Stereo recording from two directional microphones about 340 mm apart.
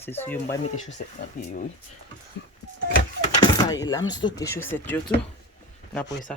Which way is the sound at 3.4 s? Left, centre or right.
Centre.